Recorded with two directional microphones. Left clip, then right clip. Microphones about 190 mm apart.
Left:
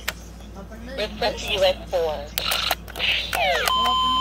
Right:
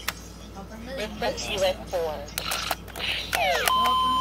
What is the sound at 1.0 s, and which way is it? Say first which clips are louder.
Speech: left 4 dB; 15° left (ahead or behind).